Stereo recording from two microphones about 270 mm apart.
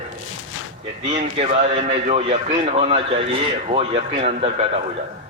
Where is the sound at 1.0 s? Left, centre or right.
Right.